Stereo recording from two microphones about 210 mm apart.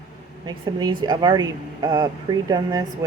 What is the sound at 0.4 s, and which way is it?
Speech, 20° right (ahead or behind).